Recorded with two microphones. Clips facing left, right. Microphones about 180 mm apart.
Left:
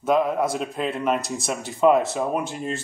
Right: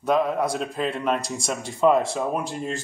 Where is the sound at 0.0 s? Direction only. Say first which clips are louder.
Left 1 dB; centre (ahead or behind).